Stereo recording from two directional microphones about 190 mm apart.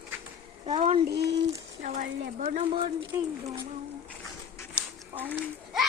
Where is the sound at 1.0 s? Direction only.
60° right (ahead or behind).